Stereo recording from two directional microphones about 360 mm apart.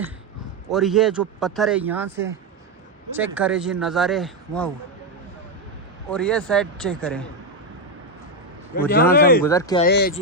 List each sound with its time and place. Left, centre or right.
0.7 s speech: centre
6.1 s speech: centre
8.7 s a man's voice: left
9.4 s speech: centre
9.8 s a man's voice: left